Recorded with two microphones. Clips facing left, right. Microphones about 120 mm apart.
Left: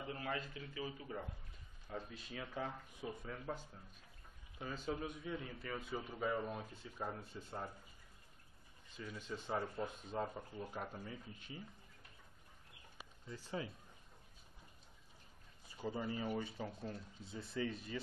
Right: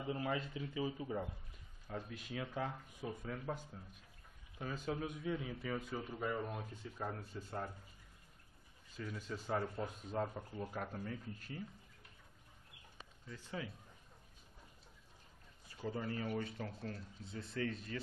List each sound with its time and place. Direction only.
0.0 s speech: 15° right (ahead or behind)
1.9 s speech: centre (ahead or behind)
8.9 s speech: centre (ahead or behind)
13.3 s speech: 30° left (ahead or behind)
15.9 s speech: 15° left (ahead or behind)